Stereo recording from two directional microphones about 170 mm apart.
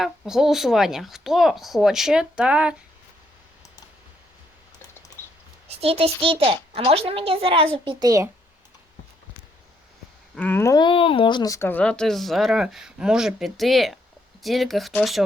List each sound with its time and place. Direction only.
0.0 s speech: centre (ahead or behind)
5.2 s a sound: 15° left (ahead or behind)
5.6 s a child's voice: 35° right (ahead or behind); by 8.3 s 20° right (ahead or behind)
10.3 s speech: 10° left (ahead or behind)
10.8 s speech: 30° left (ahead or behind); by 15.2 s centre (ahead or behind)